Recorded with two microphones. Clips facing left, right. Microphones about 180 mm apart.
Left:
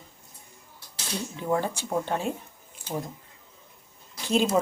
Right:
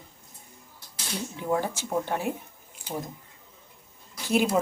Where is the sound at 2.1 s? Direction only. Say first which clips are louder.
Even; 15° right (ahead or behind).